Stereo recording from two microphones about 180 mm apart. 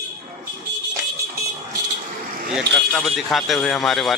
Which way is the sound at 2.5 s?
Centre (ahead or behind).